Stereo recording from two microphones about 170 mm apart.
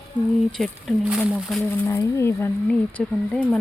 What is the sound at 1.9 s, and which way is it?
Speech, 15° left (ahead or behind).